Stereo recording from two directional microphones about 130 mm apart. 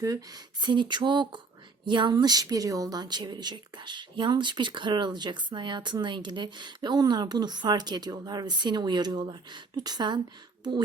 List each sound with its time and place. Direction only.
0.6 s a woman's voice: 35° right (ahead or behind)